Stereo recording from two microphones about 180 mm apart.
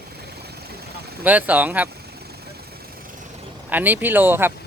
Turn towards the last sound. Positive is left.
turn(degrees=-10)  # may be behind; listen again after turning